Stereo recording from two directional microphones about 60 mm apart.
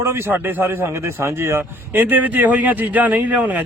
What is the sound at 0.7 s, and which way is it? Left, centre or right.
Speech, right.